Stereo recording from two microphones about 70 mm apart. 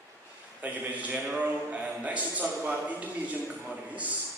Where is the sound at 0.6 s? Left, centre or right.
Right.